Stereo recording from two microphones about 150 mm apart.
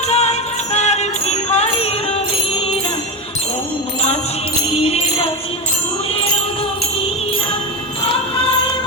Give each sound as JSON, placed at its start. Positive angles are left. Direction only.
{"t": 0.1, "sound": "music", "side_deg": 45}
{"t": 4.7, "sound": "music", "side_deg": 40}